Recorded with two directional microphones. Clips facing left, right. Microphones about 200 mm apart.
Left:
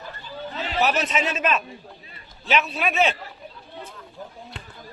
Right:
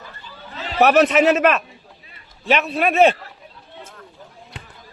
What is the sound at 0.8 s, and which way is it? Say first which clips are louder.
Speech: right 9 dB; 65° right (ahead or behind).